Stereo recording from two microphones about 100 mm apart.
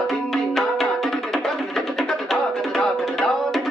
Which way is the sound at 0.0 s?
Centre (ahead or behind).